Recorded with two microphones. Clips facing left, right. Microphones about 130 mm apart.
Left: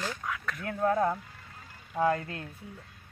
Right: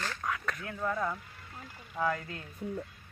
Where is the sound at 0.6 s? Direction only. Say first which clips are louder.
Left 10 dB; 55° left (ahead or behind).